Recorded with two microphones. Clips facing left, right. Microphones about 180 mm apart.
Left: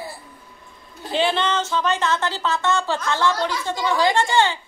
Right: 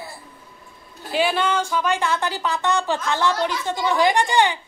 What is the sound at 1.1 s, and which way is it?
A woman's voice, 10° right (ahead or behind).